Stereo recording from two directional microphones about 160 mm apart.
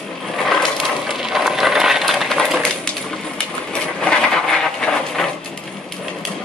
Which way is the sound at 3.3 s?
5° left (ahead or behind).